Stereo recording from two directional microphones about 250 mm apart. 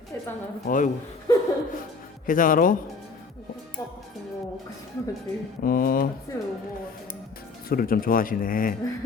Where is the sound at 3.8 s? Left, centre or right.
Centre.